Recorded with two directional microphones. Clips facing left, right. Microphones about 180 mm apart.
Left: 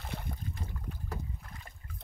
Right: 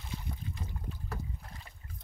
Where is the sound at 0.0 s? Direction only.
60° left (ahead or behind).